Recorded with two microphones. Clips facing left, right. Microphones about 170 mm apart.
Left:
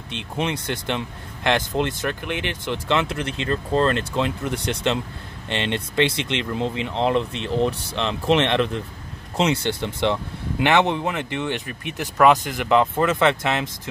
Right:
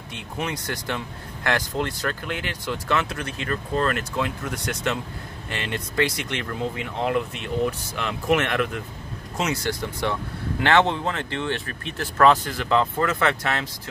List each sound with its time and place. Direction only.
0.1 s speech: 25° left (ahead or behind)